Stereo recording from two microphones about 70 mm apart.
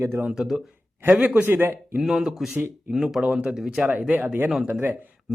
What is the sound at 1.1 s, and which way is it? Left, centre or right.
Speech, right.